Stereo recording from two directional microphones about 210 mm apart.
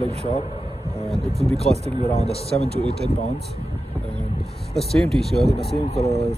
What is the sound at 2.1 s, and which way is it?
Speech, 30° left (ahead or behind).